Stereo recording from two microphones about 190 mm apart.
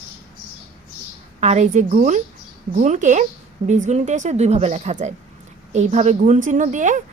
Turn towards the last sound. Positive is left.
turn(degrees=-40)  # may be behind; listen again after turning